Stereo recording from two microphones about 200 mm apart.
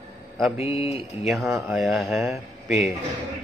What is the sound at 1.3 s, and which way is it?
Speech, centre (ahead or behind).